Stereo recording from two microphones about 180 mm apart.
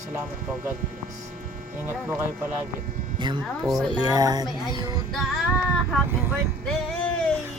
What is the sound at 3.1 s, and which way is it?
Speech, 25° right (ahead or behind).